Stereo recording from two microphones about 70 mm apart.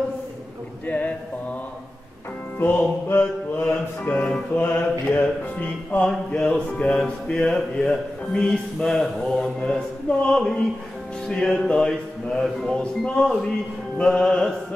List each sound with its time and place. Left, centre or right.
0.8 s a sound: left
2.6 s music: left
6.0 s speech: centre